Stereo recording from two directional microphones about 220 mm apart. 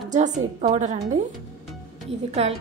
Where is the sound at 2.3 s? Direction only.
30° right (ahead or behind).